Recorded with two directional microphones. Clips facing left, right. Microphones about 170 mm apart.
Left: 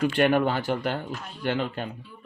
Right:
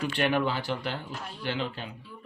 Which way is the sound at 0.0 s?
45° left (ahead or behind).